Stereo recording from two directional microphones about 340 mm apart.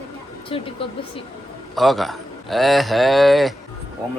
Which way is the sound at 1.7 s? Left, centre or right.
Centre.